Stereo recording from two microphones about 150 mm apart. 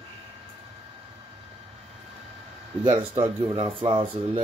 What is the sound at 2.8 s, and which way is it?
Speech, 30° right (ahead or behind).